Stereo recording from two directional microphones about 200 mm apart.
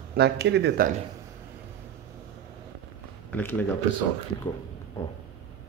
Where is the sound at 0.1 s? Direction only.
55° right (ahead or behind).